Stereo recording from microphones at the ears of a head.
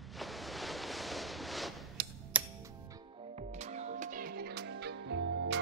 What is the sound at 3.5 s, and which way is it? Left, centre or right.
Music, right.